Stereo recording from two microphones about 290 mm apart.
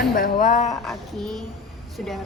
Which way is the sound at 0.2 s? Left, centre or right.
Left.